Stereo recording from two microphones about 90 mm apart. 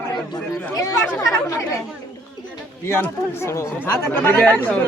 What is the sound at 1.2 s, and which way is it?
Speech, 35° left (ahead or behind).